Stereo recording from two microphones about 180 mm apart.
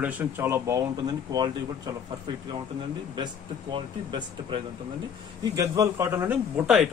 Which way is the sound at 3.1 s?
25° right (ahead or behind).